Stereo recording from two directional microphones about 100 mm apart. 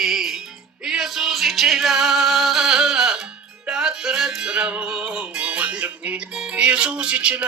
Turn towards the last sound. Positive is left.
turn(degrees=-10)  # may be behind; listen again after turning